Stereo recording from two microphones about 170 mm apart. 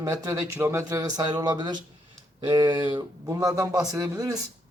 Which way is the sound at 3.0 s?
20° right (ahead or behind).